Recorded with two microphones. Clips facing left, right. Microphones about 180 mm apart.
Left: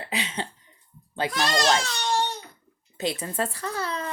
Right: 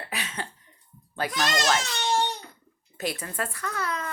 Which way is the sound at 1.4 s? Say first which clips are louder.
Left 2 dB; 35° left (ahead or behind).